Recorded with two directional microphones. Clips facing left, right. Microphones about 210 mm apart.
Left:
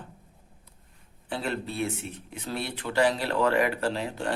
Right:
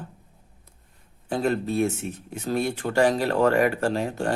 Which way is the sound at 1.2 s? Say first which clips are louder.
Right 7 dB; 45° right (ahead or behind).